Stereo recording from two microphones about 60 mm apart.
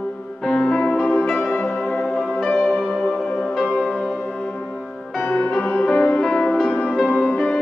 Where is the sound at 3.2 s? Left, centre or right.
Centre.